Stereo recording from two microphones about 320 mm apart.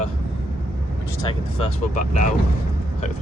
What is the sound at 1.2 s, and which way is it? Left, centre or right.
Speech, centre.